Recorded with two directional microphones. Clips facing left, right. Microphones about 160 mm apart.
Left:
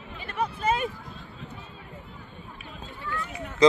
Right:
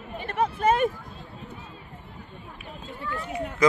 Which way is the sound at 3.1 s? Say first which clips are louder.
Right 3 dB; 35° right (ahead or behind).